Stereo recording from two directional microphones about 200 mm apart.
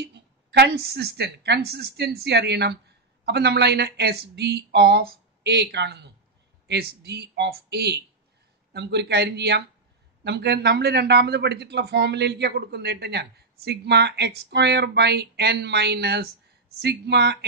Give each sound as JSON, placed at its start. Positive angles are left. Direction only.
{"t": 0.0, "sound": "speech", "side_deg": -55}